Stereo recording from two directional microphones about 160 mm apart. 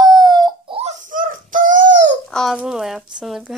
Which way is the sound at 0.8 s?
55° right (ahead or behind).